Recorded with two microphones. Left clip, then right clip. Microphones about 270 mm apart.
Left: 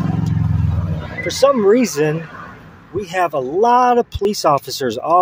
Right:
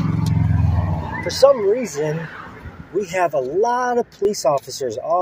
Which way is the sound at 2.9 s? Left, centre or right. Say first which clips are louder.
Left 1 dB; centre.